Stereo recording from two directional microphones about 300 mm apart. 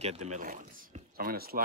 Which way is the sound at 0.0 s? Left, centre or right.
Right.